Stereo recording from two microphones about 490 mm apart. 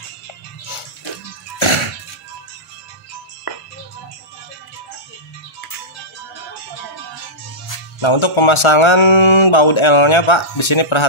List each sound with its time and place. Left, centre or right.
1.6 s music: left
8.0 s speech: left